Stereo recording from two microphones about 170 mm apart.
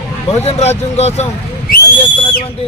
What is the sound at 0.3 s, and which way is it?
Speech, 40° left (ahead or behind).